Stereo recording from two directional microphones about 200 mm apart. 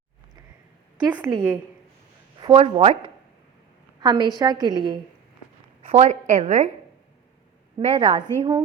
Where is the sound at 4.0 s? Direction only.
20° right (ahead or behind).